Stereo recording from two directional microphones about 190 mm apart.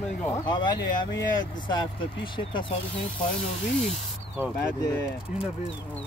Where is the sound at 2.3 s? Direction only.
25° left (ahead or behind).